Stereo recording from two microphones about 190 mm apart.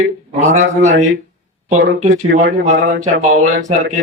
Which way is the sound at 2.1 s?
70° right (ahead or behind).